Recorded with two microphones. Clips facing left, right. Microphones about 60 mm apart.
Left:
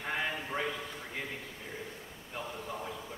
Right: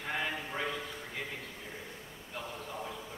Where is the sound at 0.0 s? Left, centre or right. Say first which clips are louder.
Left 1 dB; centre.